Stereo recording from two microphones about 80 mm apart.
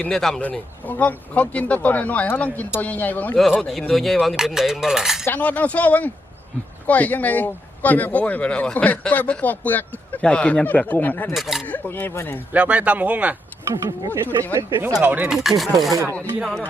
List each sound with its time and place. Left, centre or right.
0.0 s a man's voice: centre
0.9 s speech: centre
3.6 s speech: centre
5.2 s speech: left
11.3 s speech: centre
11.6 s speech: left
12.5 s speech: centre
14.5 s speech: right
15.0 s speech: right
15.4 s speech: centre